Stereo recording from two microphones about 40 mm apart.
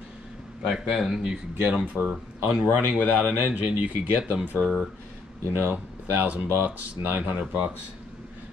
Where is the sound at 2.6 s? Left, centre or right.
Right.